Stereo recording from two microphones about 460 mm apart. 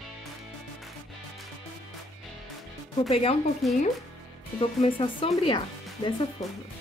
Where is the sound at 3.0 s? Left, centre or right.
Centre.